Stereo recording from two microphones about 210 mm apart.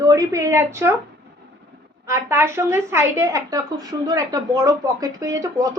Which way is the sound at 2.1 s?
15° right (ahead or behind).